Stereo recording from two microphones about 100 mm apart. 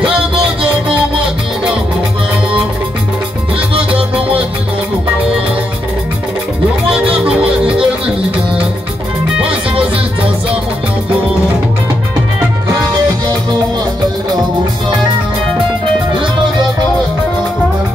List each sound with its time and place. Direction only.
3.7 s music: 65° right (ahead or behind)
7.2 s music: 10° right (ahead or behind)